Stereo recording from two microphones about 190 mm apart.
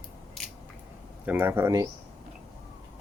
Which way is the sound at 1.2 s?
10° right (ahead or behind).